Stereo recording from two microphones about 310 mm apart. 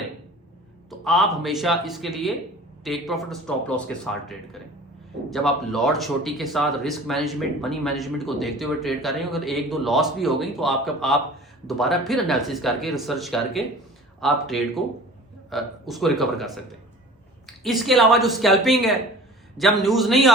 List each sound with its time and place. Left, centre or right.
0.9 s speech: centre
17.6 s speech: centre